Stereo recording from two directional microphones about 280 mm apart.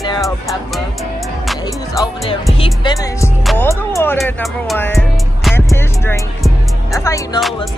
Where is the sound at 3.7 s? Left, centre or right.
Centre.